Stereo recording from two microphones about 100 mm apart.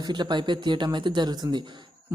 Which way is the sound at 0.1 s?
50° right (ahead or behind).